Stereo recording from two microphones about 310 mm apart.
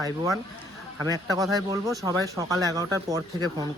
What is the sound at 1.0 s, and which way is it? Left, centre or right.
Speech, centre.